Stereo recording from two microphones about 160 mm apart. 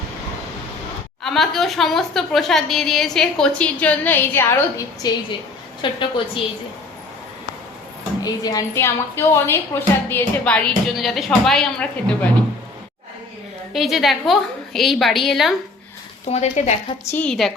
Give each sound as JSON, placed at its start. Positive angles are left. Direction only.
{"t": 1.2, "sound": "a woman's voice", "side_deg": 0}
{"t": 5.8, "sound": "a woman's voice", "side_deg": 30}
{"t": 8.2, "sound": "a woman's voice", "side_deg": 25}
{"t": 13.7, "sound": "a woman's voice", "side_deg": 0}
{"t": 16.3, "sound": "speech", "side_deg": 45}
{"t": 17.1, "sound": "a woman's voice", "side_deg": 10}